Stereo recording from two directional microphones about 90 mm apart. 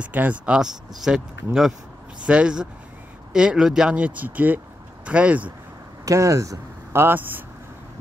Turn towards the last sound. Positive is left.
turn(degrees=-20)  # may be behind; listen again after turning